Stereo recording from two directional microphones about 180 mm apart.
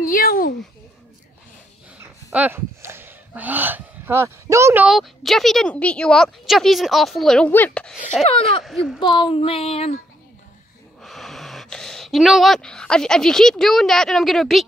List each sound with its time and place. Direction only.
0.0 s a child's voice: 50° left (ahead or behind)
2.3 s speech: 10° right (ahead or behind)
4.8 s speech: centre (ahead or behind)
9.0 s a sound: 25° left (ahead or behind)
11.0 s speech: centre (ahead or behind)